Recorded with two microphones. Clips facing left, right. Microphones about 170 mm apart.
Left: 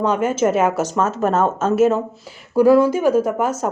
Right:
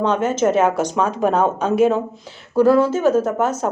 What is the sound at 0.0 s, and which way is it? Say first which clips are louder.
Speech: even; 10° left (ahead or behind).